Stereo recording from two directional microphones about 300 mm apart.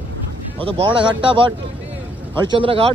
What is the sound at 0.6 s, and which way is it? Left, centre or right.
Speech, centre.